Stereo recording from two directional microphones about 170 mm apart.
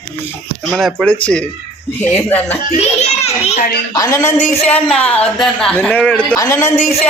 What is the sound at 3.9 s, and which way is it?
Speech, 20° left (ahead or behind).